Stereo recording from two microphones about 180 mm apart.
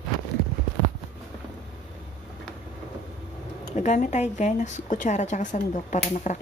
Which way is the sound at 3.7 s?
40° left (ahead or behind).